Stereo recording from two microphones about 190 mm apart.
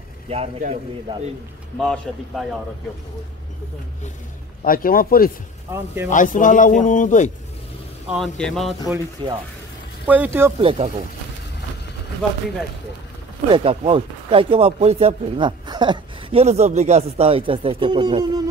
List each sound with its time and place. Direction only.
0.3 s a man's voice: 35° right (ahead or behind)
1.8 s a man's voice: centre (ahead or behind)
4.6 s a man's voice: 50° left (ahead or behind)
8.1 s a man's voice: centre (ahead or behind)
9.2 s speech: 25° right (ahead or behind)
10.0 s speech: 10° right (ahead or behind)
10.6 s speech: 30° right (ahead or behind)
13.5 s speech: 30° right (ahead or behind)